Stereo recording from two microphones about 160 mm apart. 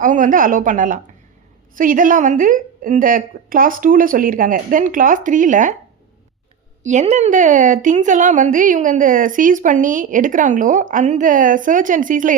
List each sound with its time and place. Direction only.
0.0 s a woman's voice: 55° right (ahead or behind)
6.8 s a woman's voice: 45° right (ahead or behind)